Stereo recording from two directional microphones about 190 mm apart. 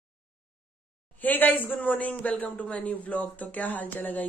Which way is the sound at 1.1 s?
10° left (ahead or behind).